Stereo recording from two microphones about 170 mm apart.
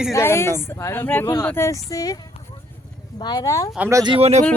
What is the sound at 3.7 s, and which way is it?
Speech, 10° right (ahead or behind).